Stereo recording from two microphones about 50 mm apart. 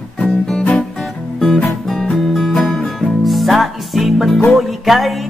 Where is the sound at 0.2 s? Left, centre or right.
Centre.